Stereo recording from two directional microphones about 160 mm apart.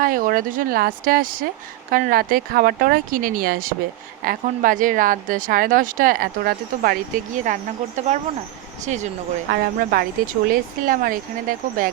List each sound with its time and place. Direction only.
0.0 s a woman's voice: 60° right (ahead or behind)
7.4 s speech: 50° right (ahead or behind)
9.5 s a woman's voice: 65° right (ahead or behind)